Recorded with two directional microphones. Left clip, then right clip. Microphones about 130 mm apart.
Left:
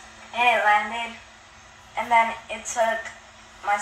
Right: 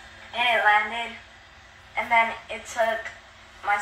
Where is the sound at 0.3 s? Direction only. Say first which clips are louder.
Left 1 dB; 30° left (ahead or behind).